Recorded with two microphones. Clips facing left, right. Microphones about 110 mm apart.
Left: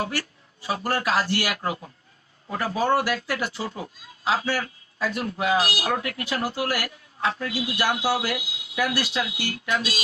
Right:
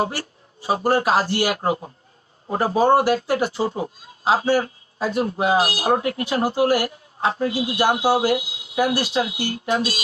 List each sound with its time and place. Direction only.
0.0 s speech: 35° right (ahead or behind)